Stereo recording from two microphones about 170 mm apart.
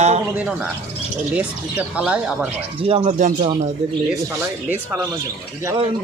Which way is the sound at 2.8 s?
40° right (ahead or behind).